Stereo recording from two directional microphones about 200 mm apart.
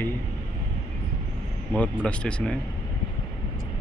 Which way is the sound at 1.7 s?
5° left (ahead or behind).